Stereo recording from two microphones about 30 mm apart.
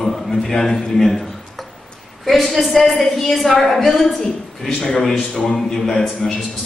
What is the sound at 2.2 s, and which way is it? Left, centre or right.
A woman's voice, centre.